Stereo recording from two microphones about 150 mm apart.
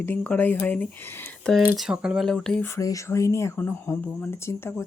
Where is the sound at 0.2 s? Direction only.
10° left (ahead or behind).